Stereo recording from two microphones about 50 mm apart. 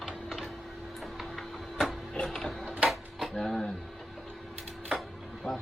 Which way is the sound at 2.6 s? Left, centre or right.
Right.